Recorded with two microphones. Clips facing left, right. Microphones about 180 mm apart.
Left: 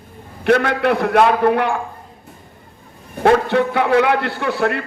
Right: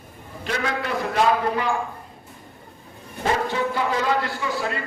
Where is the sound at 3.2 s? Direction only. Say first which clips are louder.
Left 9 dB; 65° left (ahead or behind).